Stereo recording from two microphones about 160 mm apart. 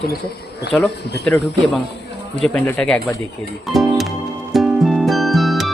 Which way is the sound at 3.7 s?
Centre (ahead or behind).